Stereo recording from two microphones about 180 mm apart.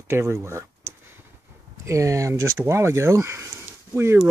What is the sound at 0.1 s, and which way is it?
Speech, 15° right (ahead or behind).